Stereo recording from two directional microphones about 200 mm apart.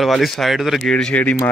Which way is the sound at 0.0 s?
Centre (ahead or behind).